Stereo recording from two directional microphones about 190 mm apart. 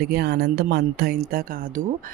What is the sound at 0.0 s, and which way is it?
Speech, 55° right (ahead or behind).